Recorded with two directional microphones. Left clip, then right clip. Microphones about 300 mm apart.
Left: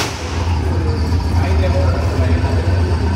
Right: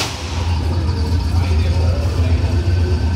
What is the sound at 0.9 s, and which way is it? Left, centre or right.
Vehicle, centre.